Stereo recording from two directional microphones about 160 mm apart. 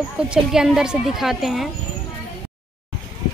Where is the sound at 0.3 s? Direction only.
5° right (ahead or behind).